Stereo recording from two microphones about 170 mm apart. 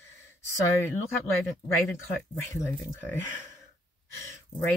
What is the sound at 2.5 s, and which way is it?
Speech, 15° left (ahead or behind).